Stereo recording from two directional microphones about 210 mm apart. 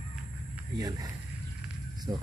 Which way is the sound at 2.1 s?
20° right (ahead or behind).